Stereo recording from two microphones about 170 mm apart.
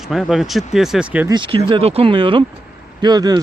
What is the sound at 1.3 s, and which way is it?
Speech, 30° right (ahead or behind).